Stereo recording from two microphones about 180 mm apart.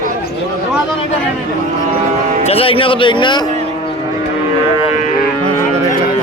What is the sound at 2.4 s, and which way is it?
Speech, 30° left (ahead or behind).